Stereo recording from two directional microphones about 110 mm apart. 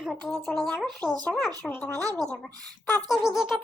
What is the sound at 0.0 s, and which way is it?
Speech, centre (ahead or behind).